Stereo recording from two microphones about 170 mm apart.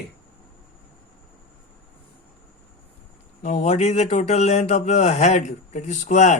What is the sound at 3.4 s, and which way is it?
Speech, 40° left (ahead or behind).